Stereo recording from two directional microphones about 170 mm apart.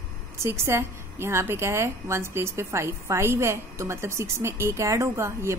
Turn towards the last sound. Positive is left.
turn(degrees=-15)  # may be behind; listen again after turning